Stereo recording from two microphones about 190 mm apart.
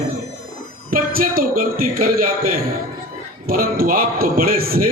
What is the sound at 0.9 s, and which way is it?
A man's voice, 50° right (ahead or behind).